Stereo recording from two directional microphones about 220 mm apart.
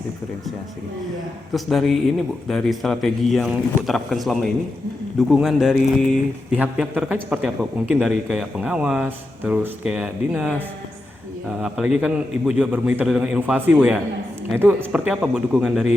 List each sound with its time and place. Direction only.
1.5 s speech: centre (ahead or behind)
11.6 s speech: 5° right (ahead or behind)